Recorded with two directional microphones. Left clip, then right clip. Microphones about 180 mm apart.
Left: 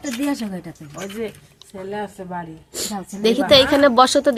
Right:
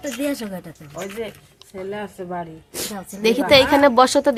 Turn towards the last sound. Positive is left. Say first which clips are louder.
# left 1 dB
turn(degrees=-5)  # may be behind; listen again after turning